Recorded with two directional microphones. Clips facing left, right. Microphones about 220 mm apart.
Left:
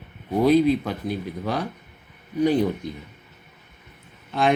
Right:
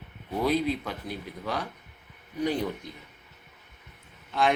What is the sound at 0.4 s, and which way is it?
Speech, 25° left (ahead or behind).